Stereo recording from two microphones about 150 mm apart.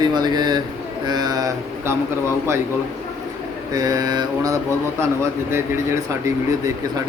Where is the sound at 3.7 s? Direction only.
25° right (ahead or behind).